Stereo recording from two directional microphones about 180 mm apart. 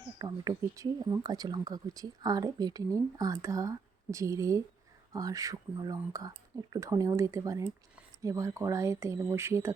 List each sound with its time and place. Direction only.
0.2 s speech: 20° right (ahead or behind)